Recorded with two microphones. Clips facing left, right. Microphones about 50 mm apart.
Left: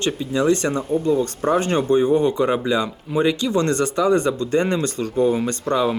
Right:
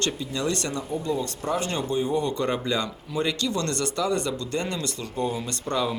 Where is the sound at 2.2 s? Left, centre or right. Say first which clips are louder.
Left 7 dB; centre.